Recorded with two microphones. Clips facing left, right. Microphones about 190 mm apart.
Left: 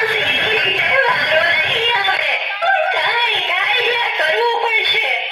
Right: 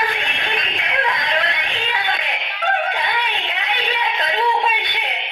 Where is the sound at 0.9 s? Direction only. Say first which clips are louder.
Left 6 dB; 85° left.